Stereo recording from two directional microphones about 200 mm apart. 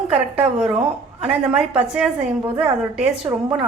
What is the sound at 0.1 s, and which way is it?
A woman's voice, 30° right (ahead or behind).